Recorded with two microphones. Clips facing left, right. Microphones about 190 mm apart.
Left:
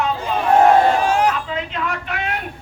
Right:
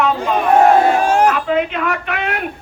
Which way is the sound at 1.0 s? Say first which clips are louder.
Right 4 dB; 45° right (ahead or behind).